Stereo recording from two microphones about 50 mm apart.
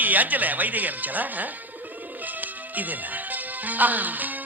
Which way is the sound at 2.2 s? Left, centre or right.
Right.